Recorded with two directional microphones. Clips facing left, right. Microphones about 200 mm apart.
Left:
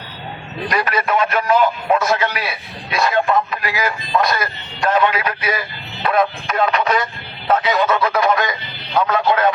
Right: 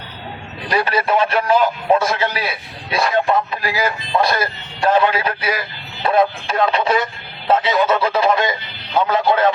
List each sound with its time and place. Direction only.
0.7 s speech: 30° right (ahead or behind)